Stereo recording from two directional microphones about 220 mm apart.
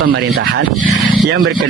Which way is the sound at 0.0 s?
55° right (ahead or behind).